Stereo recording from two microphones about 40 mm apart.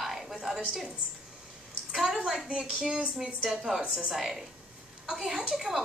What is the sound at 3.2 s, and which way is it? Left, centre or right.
A woman's voice, centre.